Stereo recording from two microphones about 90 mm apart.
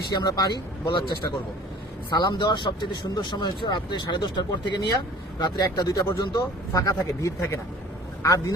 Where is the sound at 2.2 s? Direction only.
55° left (ahead or behind).